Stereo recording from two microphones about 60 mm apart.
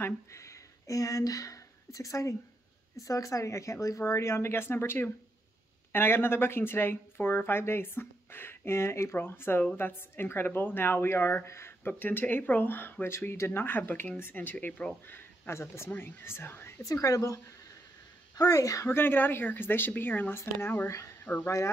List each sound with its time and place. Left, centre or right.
0.0 s speech: left
12.0 s speech: left
15.0 s a sound: left
15.6 s speech: left
16.8 s speech: left
18.3 s speech: left
18.9 s speech: left
21.3 s speech: left